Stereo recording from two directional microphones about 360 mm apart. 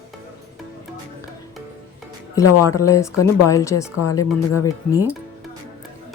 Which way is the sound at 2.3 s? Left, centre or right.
Centre.